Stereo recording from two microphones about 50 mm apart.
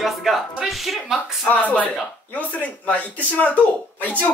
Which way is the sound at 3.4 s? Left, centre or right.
Left.